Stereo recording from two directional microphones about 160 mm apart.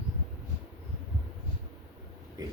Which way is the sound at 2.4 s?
25° right (ahead or behind).